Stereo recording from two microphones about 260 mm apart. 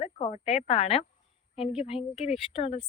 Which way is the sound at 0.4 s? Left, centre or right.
Left.